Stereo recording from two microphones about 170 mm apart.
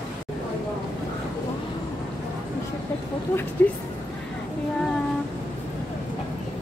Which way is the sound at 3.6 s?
10° left (ahead or behind).